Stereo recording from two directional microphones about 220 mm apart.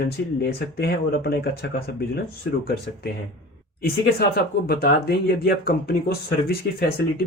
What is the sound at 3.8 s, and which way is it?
Speech, 45° left (ahead or behind).